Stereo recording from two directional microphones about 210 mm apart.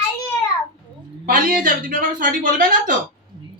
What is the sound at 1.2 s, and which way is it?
Speech, 40° right (ahead or behind).